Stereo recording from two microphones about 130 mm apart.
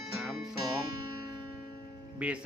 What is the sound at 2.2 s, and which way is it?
Speech, 10° right (ahead or behind).